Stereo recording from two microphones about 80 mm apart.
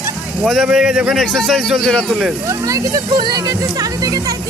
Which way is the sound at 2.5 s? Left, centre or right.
Right.